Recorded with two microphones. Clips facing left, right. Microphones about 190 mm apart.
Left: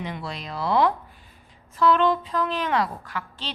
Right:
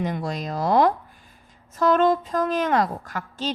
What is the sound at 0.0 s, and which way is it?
Speech, 45° right (ahead or behind).